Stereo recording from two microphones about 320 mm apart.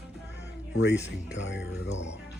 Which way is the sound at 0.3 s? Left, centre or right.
Left.